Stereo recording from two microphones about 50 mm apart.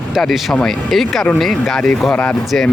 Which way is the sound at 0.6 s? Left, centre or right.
Centre.